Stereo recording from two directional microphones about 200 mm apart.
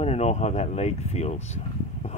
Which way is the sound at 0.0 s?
30° left (ahead or behind).